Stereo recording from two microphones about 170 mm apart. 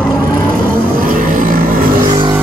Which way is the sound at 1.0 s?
50° right (ahead or behind).